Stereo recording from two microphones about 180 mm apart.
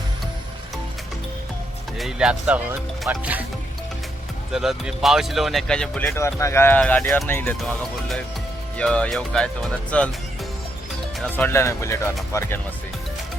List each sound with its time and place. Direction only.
2.0 s speech: 5° right (ahead or behind)
4.5 s speech: centre (ahead or behind)
11.2 s speech: 10° left (ahead or behind)